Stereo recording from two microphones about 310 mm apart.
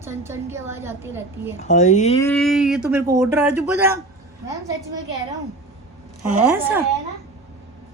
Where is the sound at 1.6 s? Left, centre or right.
Left.